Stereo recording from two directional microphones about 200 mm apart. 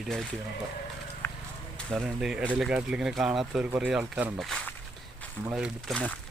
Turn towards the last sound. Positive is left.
turn(degrees=5)  # may be behind; listen again after turning